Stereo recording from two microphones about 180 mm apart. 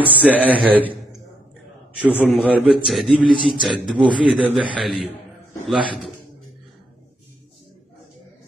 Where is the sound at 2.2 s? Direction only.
5° right (ahead or behind).